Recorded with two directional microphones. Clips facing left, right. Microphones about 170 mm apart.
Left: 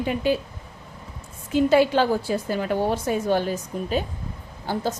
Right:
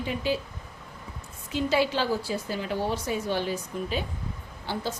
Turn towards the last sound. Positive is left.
turn(degrees=45)  # may be behind; listen again after turning